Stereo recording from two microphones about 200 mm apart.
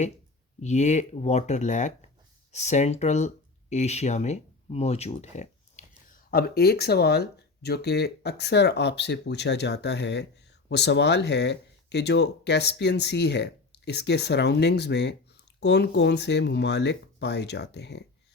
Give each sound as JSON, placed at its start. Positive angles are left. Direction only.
{"t": 0.6, "sound": "speech", "side_deg": 35}
{"t": 6.1, "sound": "speech", "side_deg": 50}